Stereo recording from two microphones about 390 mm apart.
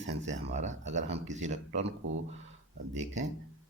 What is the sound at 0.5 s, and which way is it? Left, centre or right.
Speech, centre.